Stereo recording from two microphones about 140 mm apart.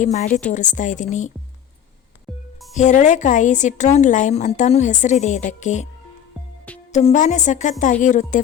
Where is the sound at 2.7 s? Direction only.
60° left (ahead or behind).